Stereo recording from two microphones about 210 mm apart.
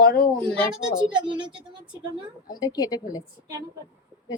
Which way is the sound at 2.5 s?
20° left (ahead or behind).